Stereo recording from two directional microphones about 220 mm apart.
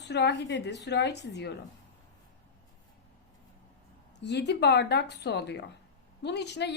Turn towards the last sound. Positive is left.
turn(degrees=50)  # may be behind; listen again after turning